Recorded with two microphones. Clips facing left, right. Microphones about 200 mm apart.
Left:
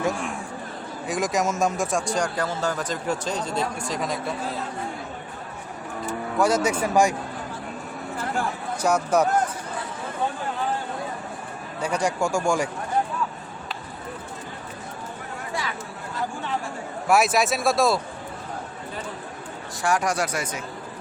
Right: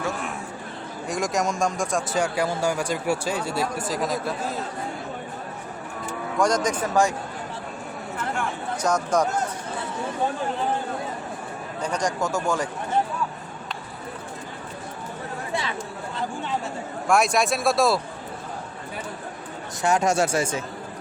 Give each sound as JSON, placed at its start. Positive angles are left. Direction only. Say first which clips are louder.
{"t": 1.0, "sound": "speech", "louder": "left 1 dB", "side_deg": 0}
{"t": 6.4, "sound": "speech", "louder": "left 1 dB", "side_deg": 5}
{"t": 8.8, "sound": "speech", "louder": "left 2 dB", "side_deg": 10}
{"t": 11.8, "sound": "speech", "louder": "left 2 dB", "side_deg": 10}
{"t": 17.1, "sound": "speech", "louder": "left 1 dB", "side_deg": 5}
{"t": 19.8, "sound": "speech", "louder": "right 3 dB", "side_deg": -25}